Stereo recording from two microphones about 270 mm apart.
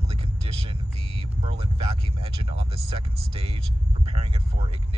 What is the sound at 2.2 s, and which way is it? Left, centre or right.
Speech, right.